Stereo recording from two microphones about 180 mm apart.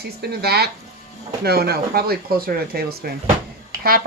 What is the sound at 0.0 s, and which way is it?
Speech, 60° right (ahead or behind).